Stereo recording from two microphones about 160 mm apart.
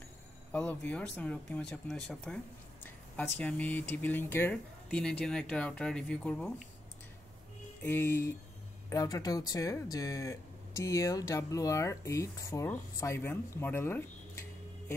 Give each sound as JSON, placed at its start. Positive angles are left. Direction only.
{"t": 0.5, "sound": "speech", "side_deg": 10}
{"t": 7.8, "sound": "speech", "side_deg": 15}